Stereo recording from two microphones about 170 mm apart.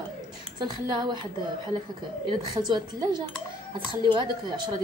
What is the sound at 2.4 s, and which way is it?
Speech, 25° right (ahead or behind).